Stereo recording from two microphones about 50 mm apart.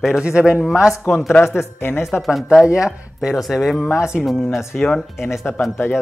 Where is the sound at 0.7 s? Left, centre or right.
Centre.